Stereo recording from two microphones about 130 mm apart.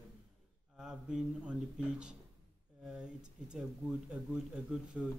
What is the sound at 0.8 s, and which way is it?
Speech, 5° right (ahead or behind).